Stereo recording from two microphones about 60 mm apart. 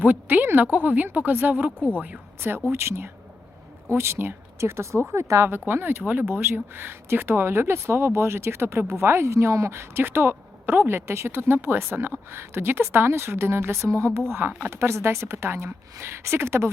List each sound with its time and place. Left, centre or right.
0.0 s speech: right
2.7 s speech: right
5.5 s speech: right
6.1 s speech: right
14.3 s speech: right